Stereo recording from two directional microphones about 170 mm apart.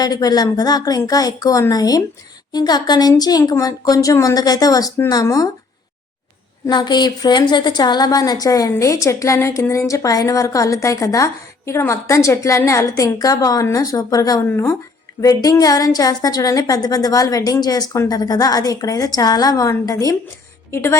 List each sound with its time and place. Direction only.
0.0 s a woman's voice: 20° left (ahead or behind)
6.7 s a woman's voice: 25° left (ahead or behind)